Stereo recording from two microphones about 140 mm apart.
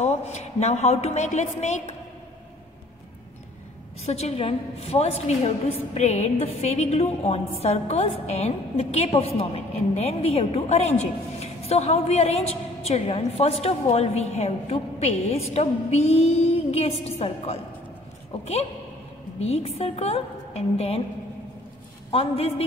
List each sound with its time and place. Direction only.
0.0 s a woman's voice: 55° left (ahead or behind)
4.0 s a woman's voice: 50° left (ahead or behind)
22.1 s a woman's voice: 45° left (ahead or behind)